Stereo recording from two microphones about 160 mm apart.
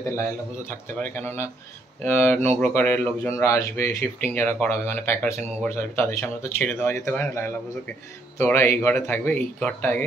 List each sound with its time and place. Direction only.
0.2 s speech: 15° left (ahead or behind)